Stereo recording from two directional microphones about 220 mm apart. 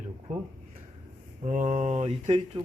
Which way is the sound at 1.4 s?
35° right (ahead or behind).